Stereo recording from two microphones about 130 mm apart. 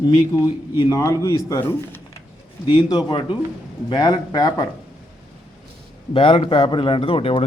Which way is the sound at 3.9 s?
30° left (ahead or behind).